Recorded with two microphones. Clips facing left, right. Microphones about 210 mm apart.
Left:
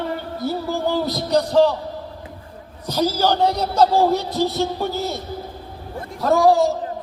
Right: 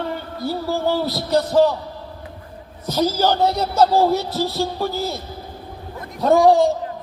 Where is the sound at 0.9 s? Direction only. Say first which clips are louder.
Even; 15° left (ahead or behind).